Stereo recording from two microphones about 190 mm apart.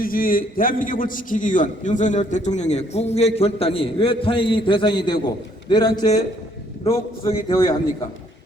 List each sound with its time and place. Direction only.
0.0 s a man's voice: 50° left (ahead or behind); by 7.5 s 30° left (ahead or behind)
7.5 s a man's voice: 20° left (ahead or behind)